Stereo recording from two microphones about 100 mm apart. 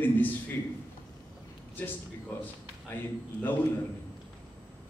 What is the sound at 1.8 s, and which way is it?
Speech, 15° left (ahead or behind).